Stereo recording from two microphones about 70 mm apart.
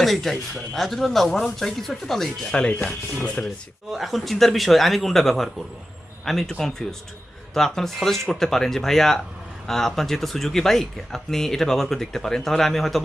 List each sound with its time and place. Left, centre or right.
0.0 s speech: centre
2.5 s speech: centre
3.9 s speech: centre